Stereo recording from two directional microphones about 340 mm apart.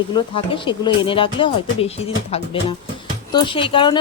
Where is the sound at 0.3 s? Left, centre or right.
Centre.